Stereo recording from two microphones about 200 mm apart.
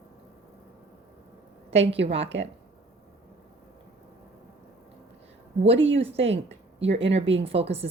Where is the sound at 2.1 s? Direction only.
65° right (ahead or behind).